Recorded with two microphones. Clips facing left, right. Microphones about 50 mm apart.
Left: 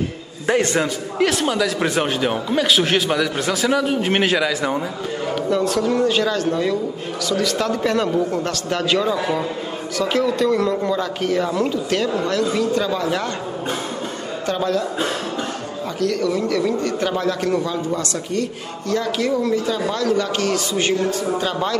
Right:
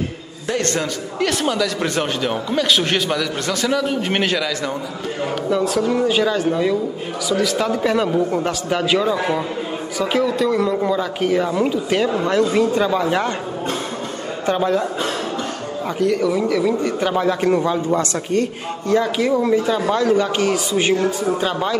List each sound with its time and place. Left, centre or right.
0.6 s a man's voice: centre
4.4 s a man's voice: centre
5.5 s a man's voice: centre
14.4 s a man's voice: centre
16.0 s a man's voice: centre
18.9 s a man's voice: centre
21.3 s a man's voice: centre